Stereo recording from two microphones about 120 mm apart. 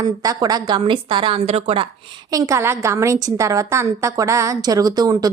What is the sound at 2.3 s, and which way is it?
A woman's voice, 25° right (ahead or behind).